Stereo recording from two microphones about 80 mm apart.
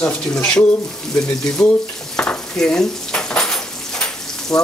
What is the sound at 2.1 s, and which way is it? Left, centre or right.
Dishes, centre.